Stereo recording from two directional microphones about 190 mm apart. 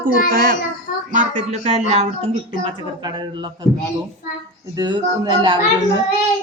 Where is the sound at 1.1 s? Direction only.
40° right (ahead or behind).